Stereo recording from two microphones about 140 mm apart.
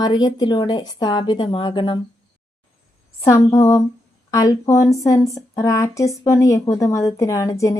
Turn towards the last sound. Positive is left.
turn(degrees=25)  # may be behind; listen again after turning